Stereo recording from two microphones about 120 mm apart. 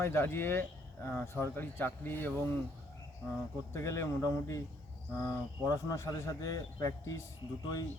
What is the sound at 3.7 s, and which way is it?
A man's voice, 25° left (ahead or behind).